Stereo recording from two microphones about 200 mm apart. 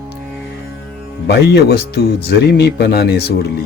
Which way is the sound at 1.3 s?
55° left (ahead or behind).